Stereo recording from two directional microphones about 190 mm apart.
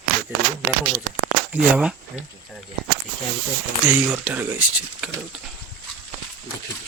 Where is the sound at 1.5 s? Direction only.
5° right (ahead or behind).